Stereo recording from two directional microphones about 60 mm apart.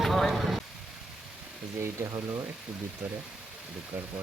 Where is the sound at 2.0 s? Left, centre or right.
Right.